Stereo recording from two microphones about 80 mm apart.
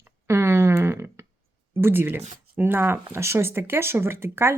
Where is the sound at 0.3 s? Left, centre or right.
Right.